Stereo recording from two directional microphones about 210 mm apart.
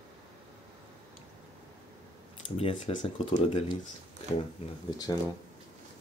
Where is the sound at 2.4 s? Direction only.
25° left (ahead or behind).